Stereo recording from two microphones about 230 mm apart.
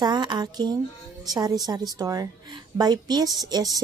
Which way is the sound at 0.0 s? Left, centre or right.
Centre.